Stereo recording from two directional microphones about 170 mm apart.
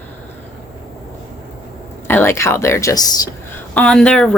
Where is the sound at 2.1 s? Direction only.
15° left (ahead or behind).